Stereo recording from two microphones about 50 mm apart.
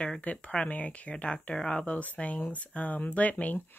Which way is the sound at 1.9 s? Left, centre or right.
Left.